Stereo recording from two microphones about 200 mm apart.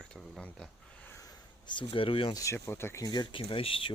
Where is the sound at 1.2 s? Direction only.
25° left (ahead or behind).